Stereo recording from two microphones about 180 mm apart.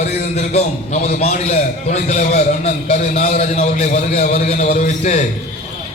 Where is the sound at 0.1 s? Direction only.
35° left (ahead or behind).